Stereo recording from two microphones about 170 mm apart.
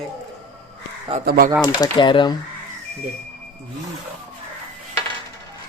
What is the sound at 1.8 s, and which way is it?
Speech, 25° left (ahead or behind).